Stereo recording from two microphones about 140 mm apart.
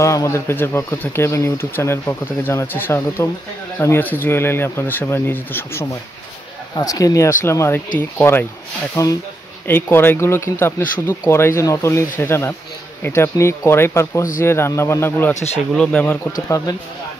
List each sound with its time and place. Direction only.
0.0 s speech: 20° left (ahead or behind)
15.3 s speech: 50° left (ahead or behind)
15.7 s speech: 5° left (ahead or behind)
16.3 s speech: 25° left (ahead or behind)